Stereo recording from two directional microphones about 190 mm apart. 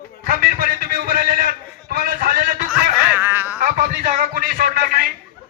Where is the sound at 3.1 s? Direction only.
10° right (ahead or behind).